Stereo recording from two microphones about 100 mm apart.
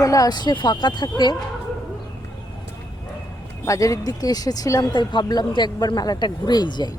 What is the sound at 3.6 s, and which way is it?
Speech, 30° left (ahead or behind).